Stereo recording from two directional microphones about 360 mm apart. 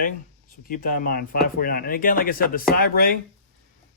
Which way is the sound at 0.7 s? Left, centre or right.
Left.